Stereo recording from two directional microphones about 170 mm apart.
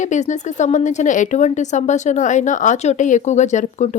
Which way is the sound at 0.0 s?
45° left (ahead or behind).